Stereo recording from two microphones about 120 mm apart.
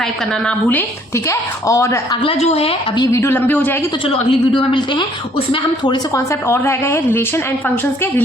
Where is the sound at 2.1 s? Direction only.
50° left (ahead or behind).